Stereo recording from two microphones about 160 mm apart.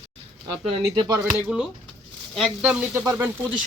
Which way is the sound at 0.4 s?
25° right (ahead or behind).